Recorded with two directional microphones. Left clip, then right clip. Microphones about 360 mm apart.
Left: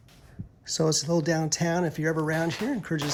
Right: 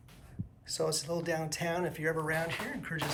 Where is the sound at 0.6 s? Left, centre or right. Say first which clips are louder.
Left 7 dB; centre.